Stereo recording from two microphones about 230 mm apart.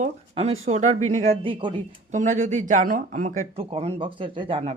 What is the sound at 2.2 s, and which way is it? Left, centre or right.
Speech, right.